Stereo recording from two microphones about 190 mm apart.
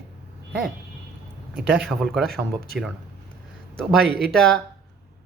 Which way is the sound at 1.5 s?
Centre (ahead or behind).